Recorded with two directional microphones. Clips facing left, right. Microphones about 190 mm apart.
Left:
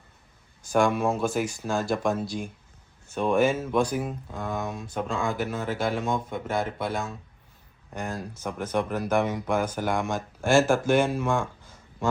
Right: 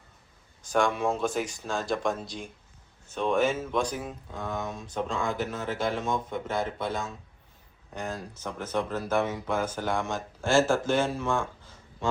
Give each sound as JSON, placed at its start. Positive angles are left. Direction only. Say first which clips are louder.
{"t": 0.6, "sound": "speech", "louder": "left 3 dB", "side_deg": 10}